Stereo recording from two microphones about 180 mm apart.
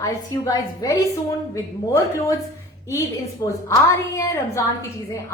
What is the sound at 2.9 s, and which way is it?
A woman's voice, 15° left (ahead or behind).